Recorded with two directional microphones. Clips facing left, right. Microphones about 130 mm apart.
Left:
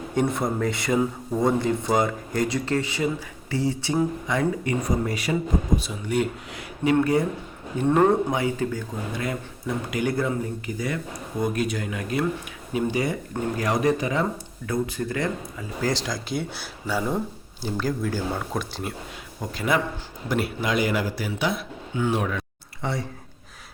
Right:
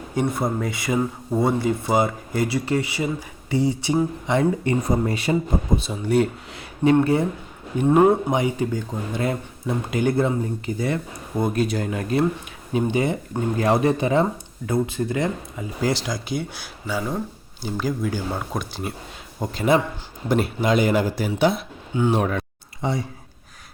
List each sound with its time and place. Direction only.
0.1 s speech: 5° right (ahead or behind)
4.3 s speech: 25° right (ahead or behind)
7.8 s speech: 15° right (ahead or behind); by 12.2 s 35° right (ahead or behind)
12.7 s speech: 25° right (ahead or behind)
16.0 s speech: centre (ahead or behind)
19.4 s speech: 25° right (ahead or behind)
22.2 s speech: 40° right (ahead or behind)
22.8 s speech: 15° right (ahead or behind)